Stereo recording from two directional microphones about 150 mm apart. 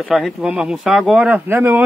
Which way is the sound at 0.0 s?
Centre (ahead or behind).